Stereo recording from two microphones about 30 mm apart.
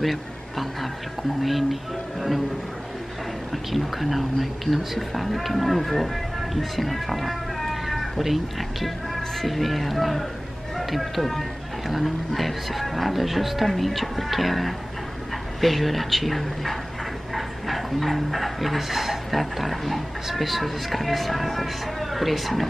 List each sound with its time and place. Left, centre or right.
0.0 s speech: centre
3.5 s speech: centre